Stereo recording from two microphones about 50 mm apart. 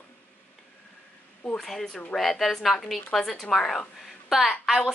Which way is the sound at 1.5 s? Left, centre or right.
Centre.